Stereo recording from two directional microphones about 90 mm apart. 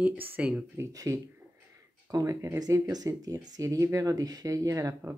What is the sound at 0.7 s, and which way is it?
Speech, 35° right (ahead or behind).